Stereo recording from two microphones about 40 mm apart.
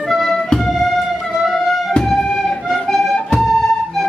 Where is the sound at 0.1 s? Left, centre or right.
Centre.